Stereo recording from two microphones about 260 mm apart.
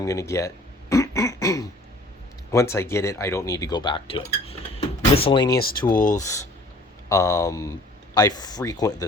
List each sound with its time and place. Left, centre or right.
0.0 s speech: centre
5.5 s speech: left
7.1 s speech: centre